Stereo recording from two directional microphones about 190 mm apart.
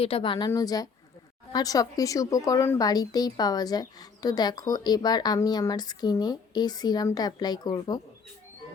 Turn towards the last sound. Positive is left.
turn(degrees=20)  # may be behind; listen again after turning